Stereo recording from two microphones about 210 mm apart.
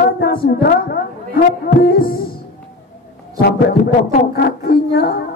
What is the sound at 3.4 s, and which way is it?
A man's voice, 50° left (ahead or behind).